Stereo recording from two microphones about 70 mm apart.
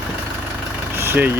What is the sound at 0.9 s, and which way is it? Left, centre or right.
Vehicle, right.